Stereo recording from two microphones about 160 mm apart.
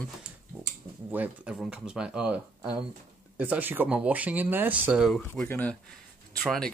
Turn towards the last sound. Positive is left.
turn(degrees=5)  # may be behind; listen again after turning